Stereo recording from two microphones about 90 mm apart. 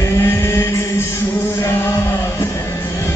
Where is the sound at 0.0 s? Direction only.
30° left (ahead or behind).